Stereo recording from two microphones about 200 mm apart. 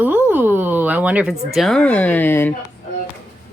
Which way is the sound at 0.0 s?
10° right (ahead or behind).